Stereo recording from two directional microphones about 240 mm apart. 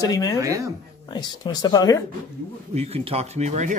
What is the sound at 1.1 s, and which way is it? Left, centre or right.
Speech, centre.